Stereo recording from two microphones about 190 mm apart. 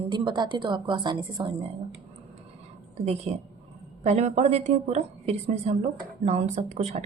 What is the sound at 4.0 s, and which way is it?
A woman's voice, 35° right (ahead or behind).